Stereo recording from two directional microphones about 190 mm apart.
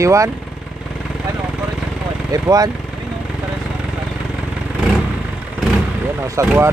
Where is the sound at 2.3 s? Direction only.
20° right (ahead or behind).